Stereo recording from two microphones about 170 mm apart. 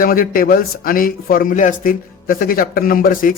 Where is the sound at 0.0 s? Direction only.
60° left (ahead or behind).